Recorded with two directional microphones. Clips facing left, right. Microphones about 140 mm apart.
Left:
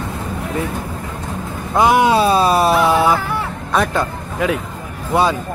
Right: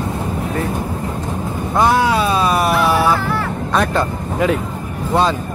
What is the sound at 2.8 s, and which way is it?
Dog, 20° left (ahead or behind).